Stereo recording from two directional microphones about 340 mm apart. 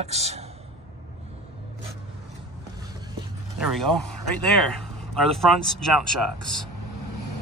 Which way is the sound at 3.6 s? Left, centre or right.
Centre.